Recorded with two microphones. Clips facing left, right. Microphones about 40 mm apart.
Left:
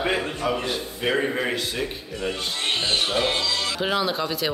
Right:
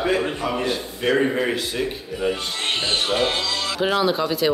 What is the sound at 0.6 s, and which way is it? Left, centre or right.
A man's voice, centre.